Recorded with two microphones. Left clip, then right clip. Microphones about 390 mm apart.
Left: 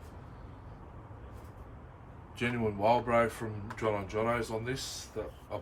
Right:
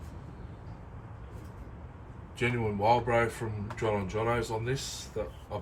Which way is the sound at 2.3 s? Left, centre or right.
Centre.